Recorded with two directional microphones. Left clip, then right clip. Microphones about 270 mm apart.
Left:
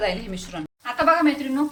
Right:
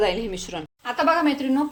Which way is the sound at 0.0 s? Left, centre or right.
Centre.